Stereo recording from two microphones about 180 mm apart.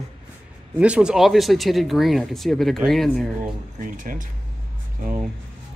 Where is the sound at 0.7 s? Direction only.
5° right (ahead or behind).